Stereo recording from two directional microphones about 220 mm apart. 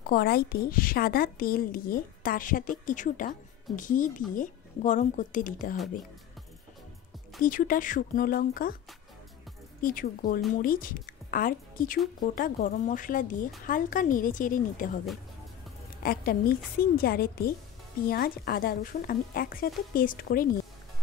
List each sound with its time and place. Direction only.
0.1 s a woman's voice: 45° left (ahead or behind)
7.4 s a woman's voice: 40° left (ahead or behind)
9.8 s a woman's voice: 40° left (ahead or behind)
16.0 s a woman's voice: 40° left (ahead or behind)